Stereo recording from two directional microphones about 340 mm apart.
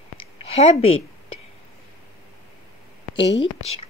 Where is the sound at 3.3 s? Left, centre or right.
Left.